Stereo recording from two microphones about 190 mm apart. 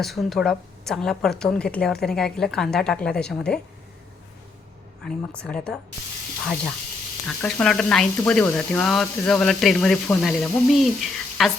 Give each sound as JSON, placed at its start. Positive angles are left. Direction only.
{"t": 0.0, "sound": "speech", "side_deg": 0}
{"t": 5.0, "sound": "speech", "side_deg": 5}
{"t": 7.3, "sound": "speech", "side_deg": 5}